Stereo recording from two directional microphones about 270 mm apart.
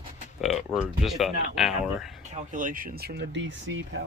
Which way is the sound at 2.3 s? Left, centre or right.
Right.